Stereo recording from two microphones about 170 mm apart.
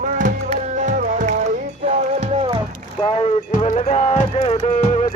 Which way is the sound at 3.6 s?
40° left (ahead or behind).